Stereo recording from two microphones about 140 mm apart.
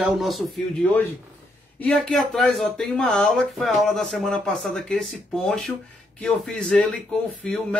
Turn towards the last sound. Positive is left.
turn(degrees=5)  # may be behind; listen again after turning